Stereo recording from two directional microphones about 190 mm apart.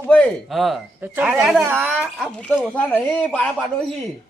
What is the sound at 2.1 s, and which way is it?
Speech, 5° left (ahead or behind).